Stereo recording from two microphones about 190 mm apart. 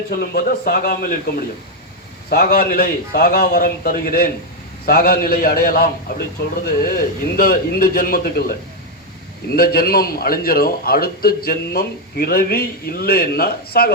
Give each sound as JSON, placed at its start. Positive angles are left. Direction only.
{"t": 0.2, "sound": "a man's voice", "side_deg": 50}
{"t": 2.3, "sound": "a man's voice", "side_deg": 50}